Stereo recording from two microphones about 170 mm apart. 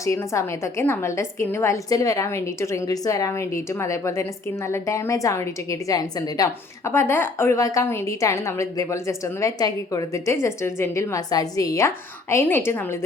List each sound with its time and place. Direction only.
0.0 s a woman's voice: 15° left (ahead or behind)